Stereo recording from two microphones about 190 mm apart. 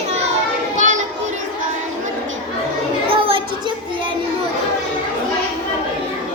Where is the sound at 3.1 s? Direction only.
30° right (ahead or behind).